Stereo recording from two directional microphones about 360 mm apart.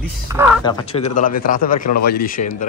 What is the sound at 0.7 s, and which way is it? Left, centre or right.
Speech, centre.